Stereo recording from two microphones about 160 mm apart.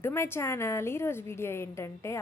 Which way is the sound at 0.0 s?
15° left (ahead or behind).